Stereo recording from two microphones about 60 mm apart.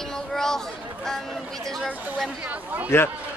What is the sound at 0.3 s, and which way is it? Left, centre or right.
Chatter, centre.